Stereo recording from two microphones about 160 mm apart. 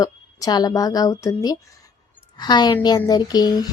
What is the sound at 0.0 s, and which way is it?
A woman's voice, 20° left (ahead or behind).